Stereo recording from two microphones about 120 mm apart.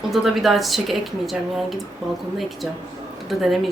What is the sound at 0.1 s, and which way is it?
A woman's voice, centre (ahead or behind).